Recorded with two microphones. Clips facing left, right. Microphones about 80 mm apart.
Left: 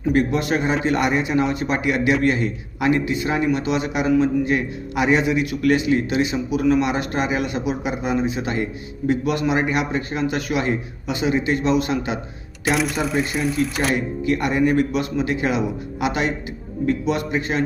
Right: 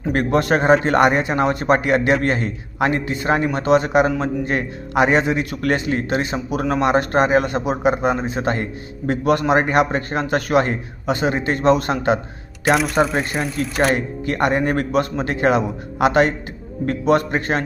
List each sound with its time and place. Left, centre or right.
0.1 s a man's voice: right
12.7 s speech: centre
13.9 s a man's voice: right